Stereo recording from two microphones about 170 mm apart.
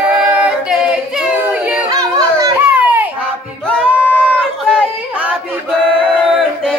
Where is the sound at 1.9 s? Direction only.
20° right (ahead or behind).